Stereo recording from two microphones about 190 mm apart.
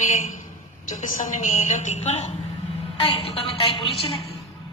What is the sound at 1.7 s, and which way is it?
A woman's voice, 40° left (ahead or behind).